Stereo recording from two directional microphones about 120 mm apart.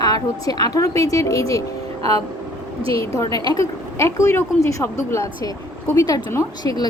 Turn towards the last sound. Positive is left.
turn(degrees=35)  # may be behind; listen again after turning